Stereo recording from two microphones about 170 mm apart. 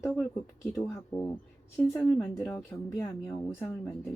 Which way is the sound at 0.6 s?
15° left (ahead or behind).